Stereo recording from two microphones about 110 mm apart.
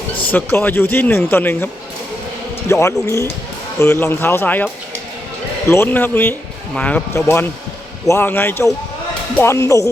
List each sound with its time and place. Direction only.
0.2 s speech: 15° left (ahead or behind)
7.1 s speech: 25° left (ahead or behind)